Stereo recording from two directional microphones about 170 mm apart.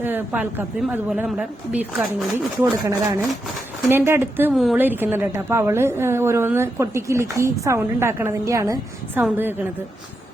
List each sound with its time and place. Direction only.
0.0 s a woman's voice: 10° right (ahead or behind)
2.8 s a woman's voice: 20° right (ahead or behind)
4.5 s a woman's voice: centre (ahead or behind)
4.8 s a woman's voice: 10° right (ahead or behind)